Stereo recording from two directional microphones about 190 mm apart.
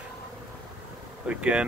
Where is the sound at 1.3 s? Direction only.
5° right (ahead or behind).